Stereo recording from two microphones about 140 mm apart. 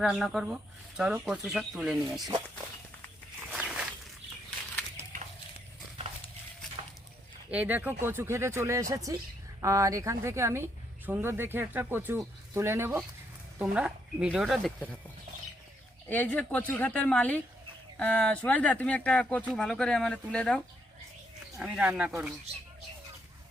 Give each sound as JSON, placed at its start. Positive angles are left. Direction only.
{"t": 0.0, "sound": "speech", "side_deg": 0}
{"t": 3.5, "sound": "a sound", "side_deg": -5}
{"t": 7.5, "sound": "a woman's voice", "side_deg": -10}
{"t": 16.0, "sound": "speech", "side_deg": 10}
{"t": 21.6, "sound": "a woman's voice", "side_deg": -5}